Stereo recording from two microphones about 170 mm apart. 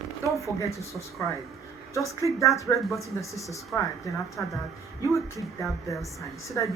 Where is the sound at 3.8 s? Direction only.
20° left (ahead or behind).